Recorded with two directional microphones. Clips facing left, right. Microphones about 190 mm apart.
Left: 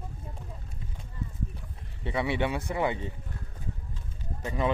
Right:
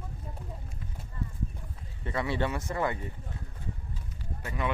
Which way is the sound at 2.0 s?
15° left (ahead or behind).